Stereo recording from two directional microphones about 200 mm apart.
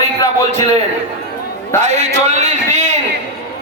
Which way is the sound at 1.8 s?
35° right (ahead or behind).